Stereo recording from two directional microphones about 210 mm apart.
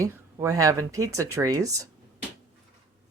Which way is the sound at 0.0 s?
15° right (ahead or behind).